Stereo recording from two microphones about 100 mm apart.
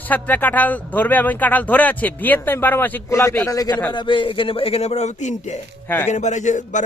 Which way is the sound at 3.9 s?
55° left (ahead or behind).